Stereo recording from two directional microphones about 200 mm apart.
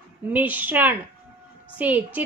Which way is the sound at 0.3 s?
10° right (ahead or behind).